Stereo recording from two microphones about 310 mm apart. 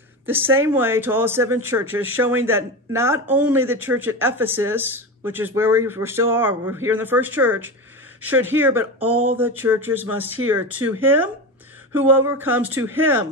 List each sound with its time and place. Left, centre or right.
0.6 s speech: centre
1.9 s speech: right
2.2 s speech: centre